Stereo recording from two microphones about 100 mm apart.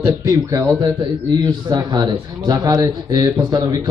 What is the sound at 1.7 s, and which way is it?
A man's voice, 40° right (ahead or behind).